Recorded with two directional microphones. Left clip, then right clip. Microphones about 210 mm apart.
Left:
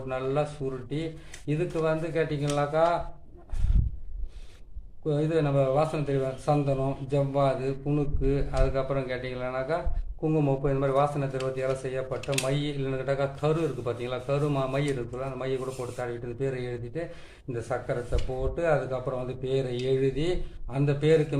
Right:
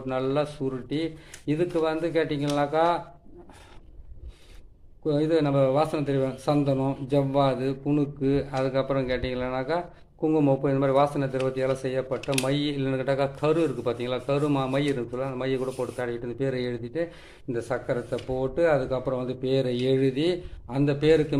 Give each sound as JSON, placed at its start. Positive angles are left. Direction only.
{"t": 0.1, "sound": "a man's voice", "side_deg": -45}
{"t": 5.0, "sound": "a man's voice", "side_deg": -45}
{"t": 12.2, "sound": "speech", "side_deg": -20}
{"t": 12.5, "sound": "a man's voice", "side_deg": -40}